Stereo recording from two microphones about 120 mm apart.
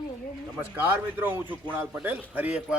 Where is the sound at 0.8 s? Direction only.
15° right (ahead or behind).